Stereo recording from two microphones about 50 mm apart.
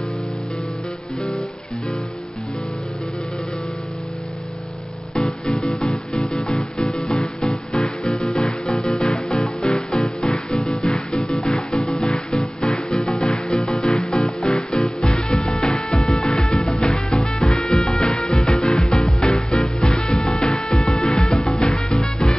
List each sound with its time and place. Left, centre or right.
5.2 s music: centre
6.1 s music: centre
8.3 s music: centre
14.4 s music: centre
14.8 s music: centre
16.3 s music: centre
21.1 s music: centre